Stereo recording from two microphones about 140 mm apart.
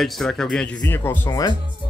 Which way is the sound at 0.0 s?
Centre (ahead or behind).